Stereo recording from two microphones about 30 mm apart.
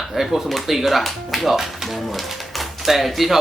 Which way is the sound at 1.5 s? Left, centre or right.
Centre.